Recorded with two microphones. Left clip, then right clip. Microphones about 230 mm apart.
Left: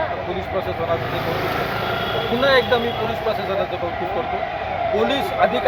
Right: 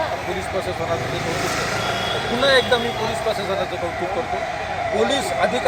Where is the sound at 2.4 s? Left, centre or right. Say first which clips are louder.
Even; centre.